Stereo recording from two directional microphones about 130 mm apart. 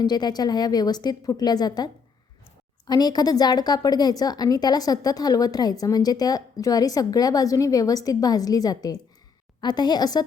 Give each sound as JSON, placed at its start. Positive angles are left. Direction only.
{"t": 0.0, "sound": "a woman's voice", "side_deg": 30}